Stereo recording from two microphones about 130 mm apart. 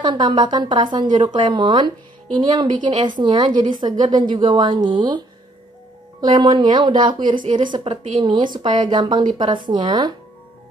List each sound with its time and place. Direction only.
0.0 s a woman's voice: 35° right (ahead or behind)
6.2 s a woman's voice: 35° right (ahead or behind)